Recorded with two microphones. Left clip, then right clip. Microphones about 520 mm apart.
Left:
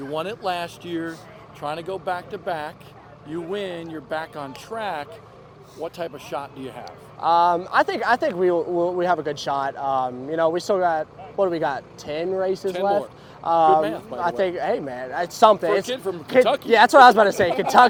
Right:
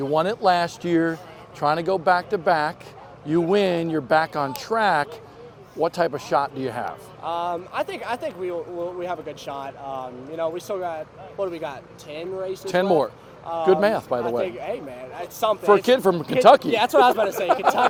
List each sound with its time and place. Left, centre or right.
0.1 s speech: right
3.2 s speech: right
6.8 s speech: left
12.6 s speech: right
13.4 s a man's voice: left
13.8 s speech: right
15.2 s speech: left
15.9 s speech: right
16.7 s speech: left